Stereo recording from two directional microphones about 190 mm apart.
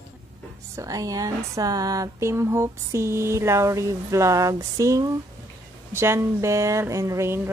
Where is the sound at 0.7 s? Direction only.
20° right (ahead or behind).